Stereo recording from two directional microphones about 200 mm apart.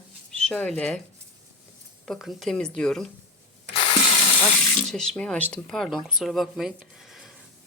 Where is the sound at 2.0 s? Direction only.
Centre (ahead or behind).